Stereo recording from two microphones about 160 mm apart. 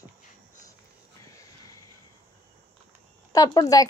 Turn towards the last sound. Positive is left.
turn(degrees=20)  # may be behind; listen again after turning